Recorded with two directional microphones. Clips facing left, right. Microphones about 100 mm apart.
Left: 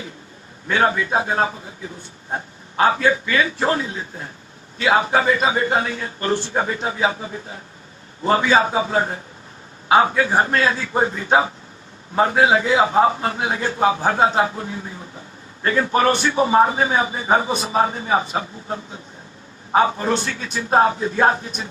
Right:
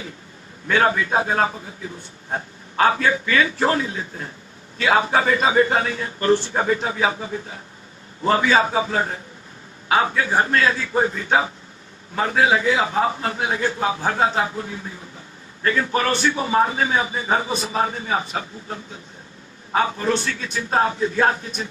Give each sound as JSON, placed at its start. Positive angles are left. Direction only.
{"t": 0.9, "sound": "a man's voice", "side_deg": 30}
{"t": 8.3, "sound": "a man's voice", "side_deg": 30}